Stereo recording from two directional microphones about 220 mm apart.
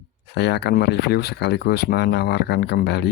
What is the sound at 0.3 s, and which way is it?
Speech, 50° left (ahead or behind).